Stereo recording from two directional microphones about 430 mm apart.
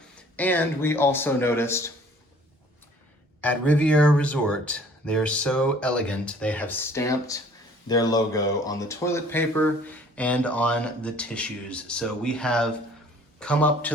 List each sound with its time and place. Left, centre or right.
0.2 s speech: centre
3.4 s speech: centre